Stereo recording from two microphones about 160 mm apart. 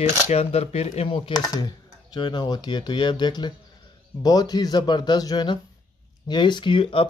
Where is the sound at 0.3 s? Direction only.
40° left (ahead or behind).